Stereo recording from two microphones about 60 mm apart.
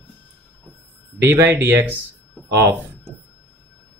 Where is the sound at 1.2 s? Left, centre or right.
Right.